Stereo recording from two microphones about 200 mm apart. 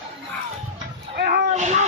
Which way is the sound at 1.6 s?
35° right (ahead or behind).